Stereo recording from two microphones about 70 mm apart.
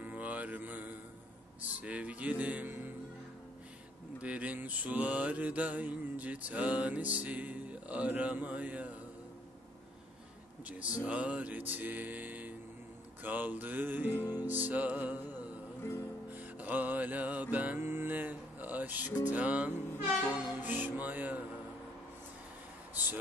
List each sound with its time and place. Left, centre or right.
0.0 s mantra: right
4.2 s mantra: centre
10.6 s mantra: right
16.3 s music: right
20.6 s mantra: right